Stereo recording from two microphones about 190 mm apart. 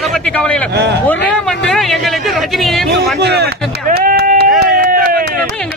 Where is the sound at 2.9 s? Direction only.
60° right (ahead or behind).